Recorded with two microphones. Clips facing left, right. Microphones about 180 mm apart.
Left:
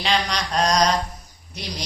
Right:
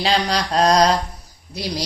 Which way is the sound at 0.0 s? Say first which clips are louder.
Right 4 dB; 35° right (ahead or behind).